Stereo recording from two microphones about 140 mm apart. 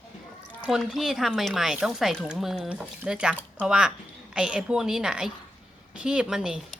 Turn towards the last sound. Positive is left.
turn(degrees=-5)  # may be behind; listen again after turning